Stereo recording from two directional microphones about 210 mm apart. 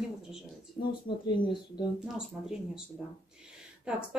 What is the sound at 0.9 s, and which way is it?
Speech, 25° left (ahead or behind).